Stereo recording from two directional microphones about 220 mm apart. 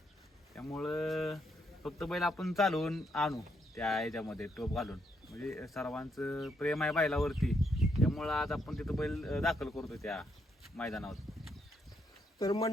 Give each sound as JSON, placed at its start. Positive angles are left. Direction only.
{"t": 0.8, "sound": "speech", "side_deg": 0}
{"t": 12.4, "sound": "speech", "side_deg": 15}